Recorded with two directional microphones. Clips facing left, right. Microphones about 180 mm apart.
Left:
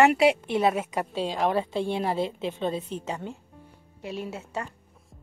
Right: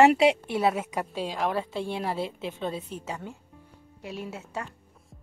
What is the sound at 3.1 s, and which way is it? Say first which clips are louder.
Speech: left 2 dB; 20° left (ahead or behind).